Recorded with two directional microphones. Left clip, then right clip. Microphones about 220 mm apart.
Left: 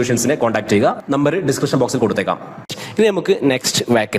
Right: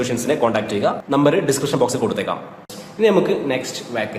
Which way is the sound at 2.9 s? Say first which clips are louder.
Left 1 dB; 50° left (ahead or behind).